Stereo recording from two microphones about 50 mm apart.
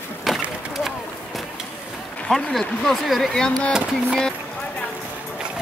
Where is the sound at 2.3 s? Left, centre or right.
Centre.